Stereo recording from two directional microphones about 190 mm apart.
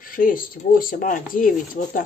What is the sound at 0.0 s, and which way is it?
Speech, 45° left (ahead or behind).